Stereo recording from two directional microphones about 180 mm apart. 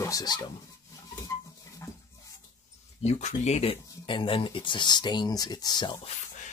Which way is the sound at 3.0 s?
40° left (ahead or behind).